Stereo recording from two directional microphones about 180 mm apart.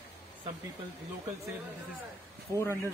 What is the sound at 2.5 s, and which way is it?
Speech, 15° left (ahead or behind).